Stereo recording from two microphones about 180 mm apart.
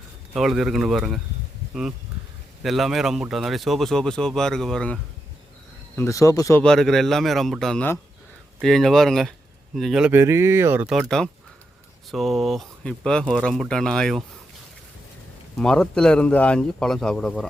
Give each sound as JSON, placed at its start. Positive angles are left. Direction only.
{"t": 0.3, "sound": "speech", "side_deg": 0}
{"t": 2.6, "sound": "speech", "side_deg": 0}
{"t": 6.0, "sound": "speech", "side_deg": 15}
{"t": 6.6, "sound": "speech", "side_deg": 0}
{"t": 10.1, "sound": "speech", "side_deg": -15}
{"t": 15.5, "sound": "speech", "side_deg": 5}